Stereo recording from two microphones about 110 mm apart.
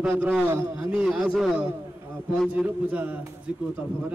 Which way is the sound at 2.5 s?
15° right (ahead or behind).